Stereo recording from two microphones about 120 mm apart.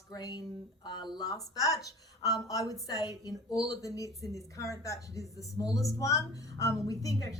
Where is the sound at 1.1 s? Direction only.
30° left (ahead or behind).